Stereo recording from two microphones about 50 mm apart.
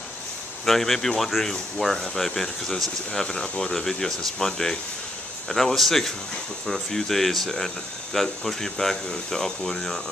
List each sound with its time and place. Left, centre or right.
0.7 s speech: centre